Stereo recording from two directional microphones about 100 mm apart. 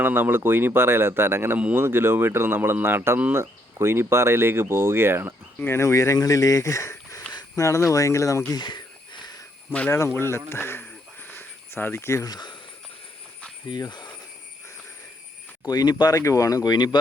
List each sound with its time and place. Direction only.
0.0 s speech: 20° right (ahead or behind)
5.5 s speech: 25° left (ahead or behind)
8.5 s a sound: 50° left (ahead or behind)
9.9 s speech: 30° left (ahead or behind)
10.5 s a sound: 25° left (ahead or behind)
13.7 s speech: 45° left (ahead or behind)
15.6 s speech: 40° left (ahead or behind)
16.1 s speech: 35° left (ahead or behind)